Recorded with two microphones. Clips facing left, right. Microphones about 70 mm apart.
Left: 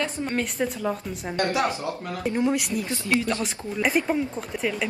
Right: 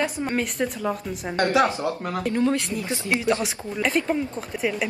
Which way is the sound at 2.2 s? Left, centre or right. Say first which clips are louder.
Right 1 dB; centre.